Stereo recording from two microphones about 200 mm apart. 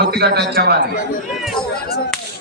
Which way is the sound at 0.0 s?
55° right (ahead or behind).